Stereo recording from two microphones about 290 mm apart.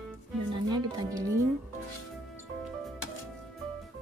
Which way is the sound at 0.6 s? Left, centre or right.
Centre.